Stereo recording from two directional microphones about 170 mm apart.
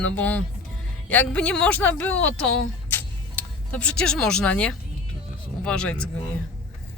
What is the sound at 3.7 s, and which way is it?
Speech, 5° left (ahead or behind).